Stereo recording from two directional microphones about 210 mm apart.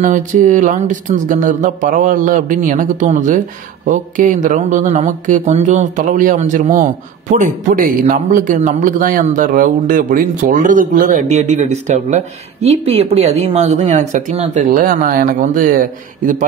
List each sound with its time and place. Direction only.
0.0 s speech: 35° right (ahead or behind)